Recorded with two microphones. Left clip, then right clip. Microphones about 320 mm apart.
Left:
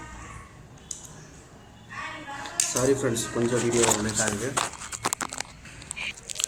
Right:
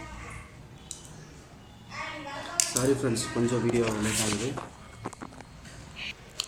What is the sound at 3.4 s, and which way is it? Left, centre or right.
Speech, left.